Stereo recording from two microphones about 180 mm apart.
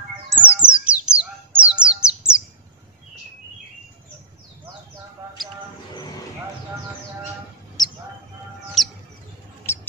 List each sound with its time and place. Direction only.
0.4 s bird: 5° right (ahead or behind)
7.8 s mouse: 20° left (ahead or behind)
8.8 s bird: centre (ahead or behind)
9.6 s mouse: 15° left (ahead or behind)